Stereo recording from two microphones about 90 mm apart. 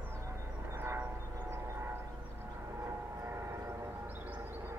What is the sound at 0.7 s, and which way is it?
Train, 25° right (ahead or behind).